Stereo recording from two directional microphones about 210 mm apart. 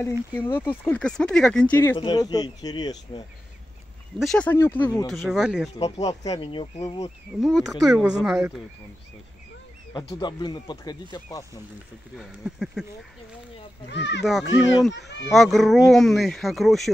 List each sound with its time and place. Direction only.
0.3 s speech: 10° left (ahead or behind)
2.0 s speech: 20° left (ahead or behind)
4.2 s speech: 5° left (ahead or behind)
5.8 s speech: 30° left (ahead or behind)
7.3 s speech: centre (ahead or behind)
9.9 s speech: 20° left (ahead or behind)
12.2 s speech: centre (ahead or behind)
13.8 s a child's voice: 55° left (ahead or behind)
14.2 s speech: centre (ahead or behind)
15.0 s speech: 55° left (ahead or behind)
15.3 s speech: centre (ahead or behind)